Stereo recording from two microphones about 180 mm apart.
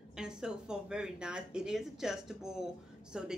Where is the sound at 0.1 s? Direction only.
5° right (ahead or behind).